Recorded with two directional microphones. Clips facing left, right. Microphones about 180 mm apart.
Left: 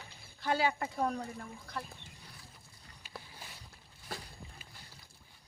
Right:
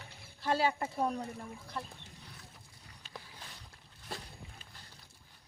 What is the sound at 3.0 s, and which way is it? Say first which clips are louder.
Boat: left 1 dB; 10° left (ahead or behind).